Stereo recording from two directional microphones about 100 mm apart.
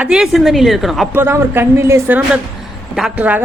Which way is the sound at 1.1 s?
25° right (ahead or behind).